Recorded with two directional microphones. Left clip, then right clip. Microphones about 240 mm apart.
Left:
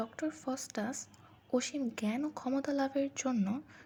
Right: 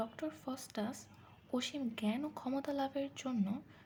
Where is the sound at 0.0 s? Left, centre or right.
Centre.